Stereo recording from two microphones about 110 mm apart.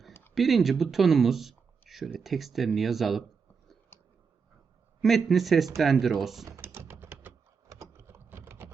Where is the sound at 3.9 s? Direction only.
20° left (ahead or behind).